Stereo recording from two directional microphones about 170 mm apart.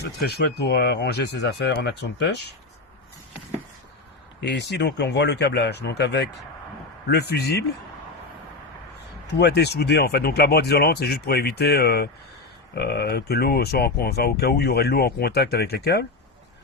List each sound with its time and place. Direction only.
0.0 s speech: 75° left (ahead or behind); by 2.6 s 90° left
4.4 s speech: 80° left
7.1 s speech: 70° left (ahead or behind)
9.4 s speech: 80° left